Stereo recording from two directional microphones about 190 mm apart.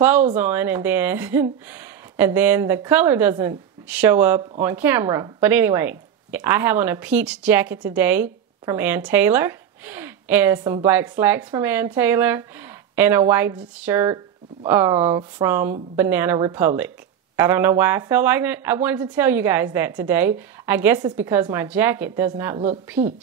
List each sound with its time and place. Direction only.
0.4 s a woman's voice: 10° right (ahead or behind)
15.0 s speech: 25° right (ahead or behind)
15.4 s a woman's voice: 10° right (ahead or behind)
23.0 s a woman's voice: 35° right (ahead or behind)